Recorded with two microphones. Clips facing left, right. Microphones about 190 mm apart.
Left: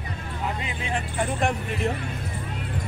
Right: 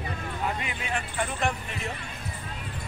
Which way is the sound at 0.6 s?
30° left (ahead or behind).